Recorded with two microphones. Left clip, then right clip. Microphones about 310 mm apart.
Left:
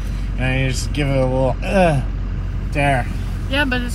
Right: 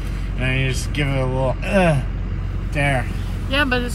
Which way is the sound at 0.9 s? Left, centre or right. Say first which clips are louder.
Left 4 dB; centre.